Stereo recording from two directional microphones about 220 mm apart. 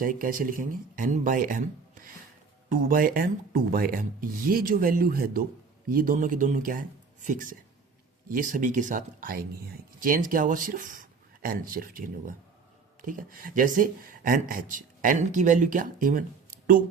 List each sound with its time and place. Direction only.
0.0 s speech: 40° right (ahead or behind)